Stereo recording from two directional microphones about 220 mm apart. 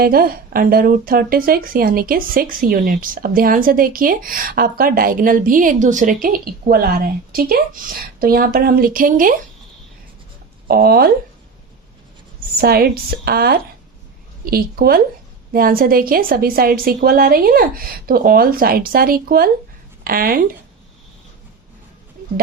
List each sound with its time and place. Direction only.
0.0 s speech: 45° right (ahead or behind)
10.7 s a woman's voice: 45° right (ahead or behind)
12.5 s a woman's voice: 45° right (ahead or behind)